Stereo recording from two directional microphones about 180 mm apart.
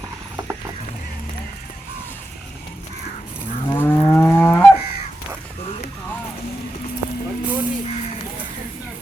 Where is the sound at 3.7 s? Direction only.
10° left (ahead or behind).